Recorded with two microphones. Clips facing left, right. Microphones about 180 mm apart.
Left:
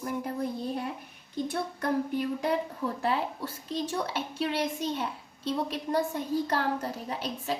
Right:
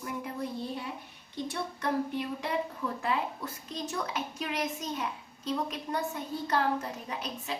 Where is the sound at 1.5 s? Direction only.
45° left (ahead or behind).